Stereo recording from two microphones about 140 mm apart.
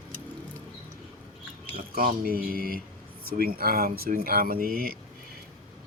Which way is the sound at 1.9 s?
85° right.